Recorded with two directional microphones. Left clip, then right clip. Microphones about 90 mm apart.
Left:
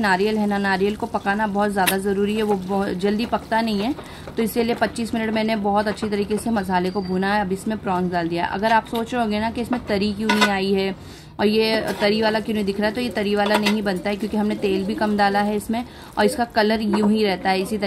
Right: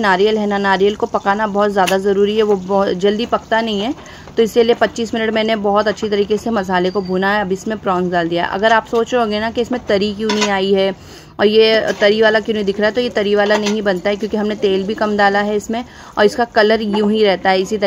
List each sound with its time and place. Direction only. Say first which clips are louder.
0.0 s speech: right 6 dB; 35° right (ahead or behind)